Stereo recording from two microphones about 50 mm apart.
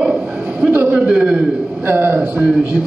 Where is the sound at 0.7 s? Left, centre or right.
Right.